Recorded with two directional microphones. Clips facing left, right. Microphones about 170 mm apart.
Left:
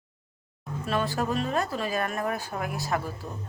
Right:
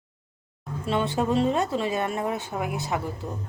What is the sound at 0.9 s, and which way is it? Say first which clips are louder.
Speech: right 3 dB; 25° right (ahead or behind).